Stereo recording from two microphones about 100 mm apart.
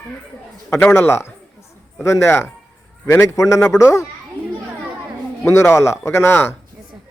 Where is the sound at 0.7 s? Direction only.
25° left (ahead or behind).